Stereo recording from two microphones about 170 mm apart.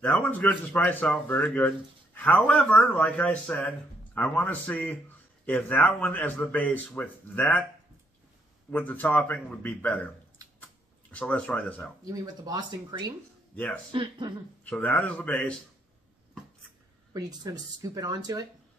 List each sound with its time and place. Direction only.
0.0 s speech: 10° left (ahead or behind)
8.6 s speech: 10° left (ahead or behind)
11.1 s speech: 5° left (ahead or behind)
12.1 s speech: 20° right (ahead or behind)
14.6 s speech: 10° left (ahead or behind)
17.1 s speech: 25° right (ahead or behind)